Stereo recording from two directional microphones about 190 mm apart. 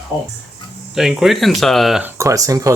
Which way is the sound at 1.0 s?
Centre (ahead or behind).